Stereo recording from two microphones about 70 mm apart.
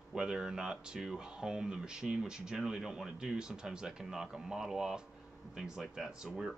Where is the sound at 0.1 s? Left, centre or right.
Centre.